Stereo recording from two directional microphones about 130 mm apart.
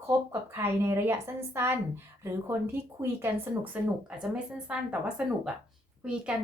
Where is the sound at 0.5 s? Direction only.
20° right (ahead or behind).